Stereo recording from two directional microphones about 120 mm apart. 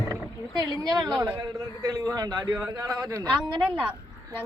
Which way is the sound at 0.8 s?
30° right (ahead or behind).